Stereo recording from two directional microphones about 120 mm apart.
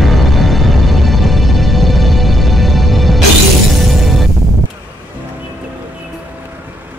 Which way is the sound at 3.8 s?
Centre (ahead or behind).